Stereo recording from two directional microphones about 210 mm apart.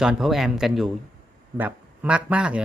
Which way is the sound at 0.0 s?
Centre (ahead or behind).